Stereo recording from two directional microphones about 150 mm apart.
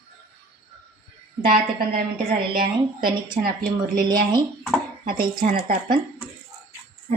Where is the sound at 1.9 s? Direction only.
75° right (ahead or behind).